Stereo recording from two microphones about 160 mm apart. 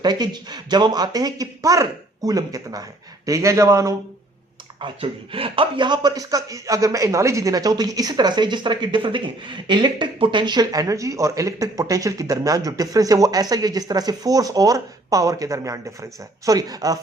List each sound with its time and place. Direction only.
0.0 s speech: 25° right (ahead or behind)
4.8 s speech: 35° right (ahead or behind)